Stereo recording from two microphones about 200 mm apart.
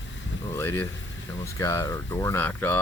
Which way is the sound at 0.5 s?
15° left (ahead or behind).